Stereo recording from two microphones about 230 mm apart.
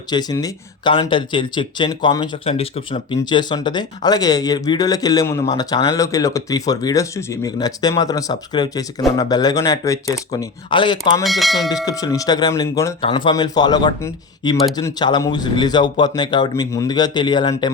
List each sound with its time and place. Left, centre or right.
0.1 s speech: centre
11.2 s speech: centre
11.9 s speech: centre